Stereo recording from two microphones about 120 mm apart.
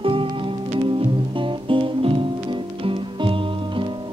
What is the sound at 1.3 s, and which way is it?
Guitar, 45° right (ahead or behind).